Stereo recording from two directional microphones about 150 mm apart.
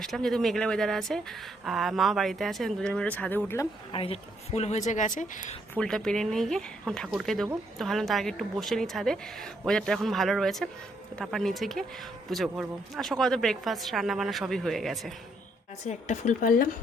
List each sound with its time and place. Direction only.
0.0 s speech: centre (ahead or behind)
3.9 s a woman's voice: 40° left (ahead or behind); by 5.5 s 60° left (ahead or behind)
5.7 s speech: 5° left (ahead or behind)
15.8 s speech: 50° left (ahead or behind)